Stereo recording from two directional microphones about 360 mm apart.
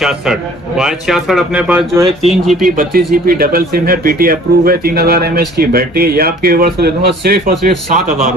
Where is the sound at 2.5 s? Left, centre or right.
Right.